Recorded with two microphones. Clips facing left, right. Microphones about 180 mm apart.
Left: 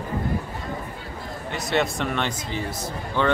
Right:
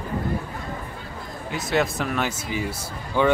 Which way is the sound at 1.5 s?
Centre (ahead or behind).